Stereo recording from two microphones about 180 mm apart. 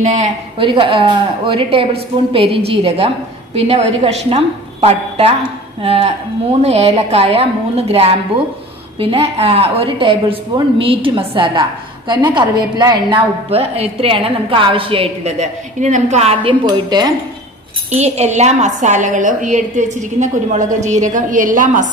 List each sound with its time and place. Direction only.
0.0 s a woman's voice: 40° right (ahead or behind)
0.6 s a woman's voice: 30° right (ahead or behind)
16.6 s a woman's voice: 20° right (ahead or behind)
17.9 s a woman's voice: 35° right (ahead or behind)